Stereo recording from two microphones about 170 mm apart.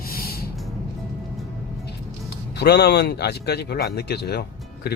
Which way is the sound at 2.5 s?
75° left (ahead or behind).